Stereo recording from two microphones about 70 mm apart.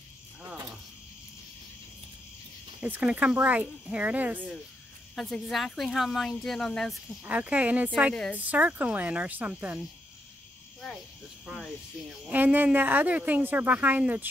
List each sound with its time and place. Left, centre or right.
2.8 s speech: centre
5.1 s speech: centre
7.2 s speech: right
11.4 s speech: centre
12.3 s speech: right